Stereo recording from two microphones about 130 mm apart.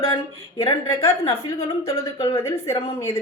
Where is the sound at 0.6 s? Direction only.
25° left (ahead or behind).